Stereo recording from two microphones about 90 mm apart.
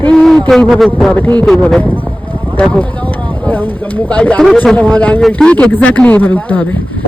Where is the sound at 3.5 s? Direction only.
20° left (ahead or behind).